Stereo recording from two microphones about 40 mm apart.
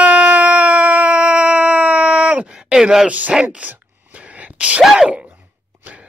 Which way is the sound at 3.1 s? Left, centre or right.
Right.